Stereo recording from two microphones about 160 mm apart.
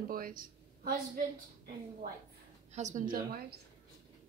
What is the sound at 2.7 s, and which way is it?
Speech, 50° right (ahead or behind).